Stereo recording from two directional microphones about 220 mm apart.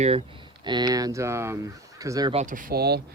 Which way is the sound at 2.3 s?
35° right (ahead or behind).